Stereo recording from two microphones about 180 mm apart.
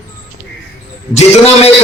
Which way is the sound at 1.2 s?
35° left (ahead or behind).